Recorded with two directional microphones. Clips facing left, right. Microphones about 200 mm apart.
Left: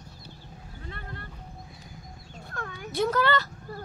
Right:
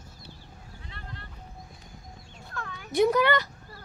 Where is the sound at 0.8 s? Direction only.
50° left (ahead or behind).